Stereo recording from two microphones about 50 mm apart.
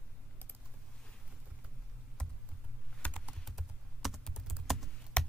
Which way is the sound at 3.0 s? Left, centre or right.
Left.